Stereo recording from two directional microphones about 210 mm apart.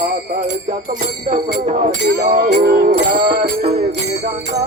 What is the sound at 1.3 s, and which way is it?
Music, 30° right (ahead or behind).